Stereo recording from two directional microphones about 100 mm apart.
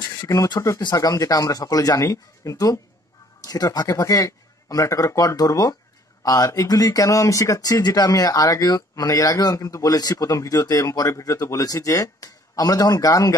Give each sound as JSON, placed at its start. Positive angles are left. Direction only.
{"t": 0.6, "sound": "speech", "side_deg": 30}